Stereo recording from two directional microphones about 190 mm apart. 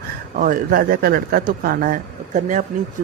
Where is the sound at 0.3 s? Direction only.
45° right (ahead or behind).